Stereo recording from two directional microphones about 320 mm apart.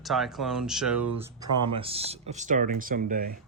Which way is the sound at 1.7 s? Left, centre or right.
Centre.